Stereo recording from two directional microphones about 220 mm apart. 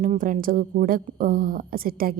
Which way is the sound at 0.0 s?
40° right (ahead or behind).